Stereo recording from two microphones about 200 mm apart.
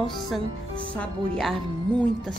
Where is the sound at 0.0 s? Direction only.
Centre (ahead or behind).